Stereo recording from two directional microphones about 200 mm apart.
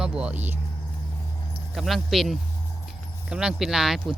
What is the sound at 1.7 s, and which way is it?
Speech, centre (ahead or behind).